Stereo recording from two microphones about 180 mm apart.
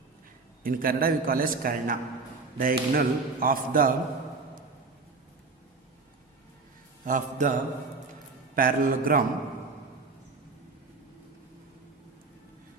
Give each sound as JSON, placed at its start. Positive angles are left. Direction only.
{"t": 0.6, "sound": "a man's voice", "side_deg": -55}
{"t": 7.0, "sound": "a man's voice", "side_deg": -45}